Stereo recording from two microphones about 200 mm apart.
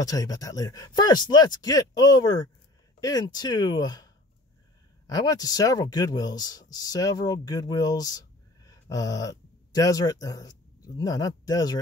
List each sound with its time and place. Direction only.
0.0 s speech: 20° left (ahead or behind)